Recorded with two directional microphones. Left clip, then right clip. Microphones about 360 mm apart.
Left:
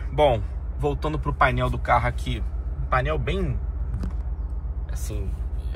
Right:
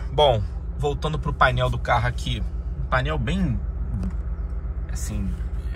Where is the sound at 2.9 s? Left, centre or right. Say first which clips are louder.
Even; centre.